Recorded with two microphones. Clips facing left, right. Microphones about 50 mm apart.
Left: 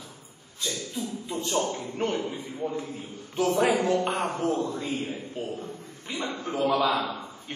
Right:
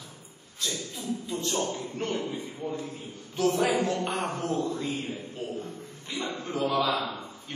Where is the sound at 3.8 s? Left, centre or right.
Left.